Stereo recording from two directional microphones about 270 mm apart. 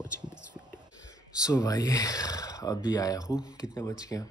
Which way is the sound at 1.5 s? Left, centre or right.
Centre.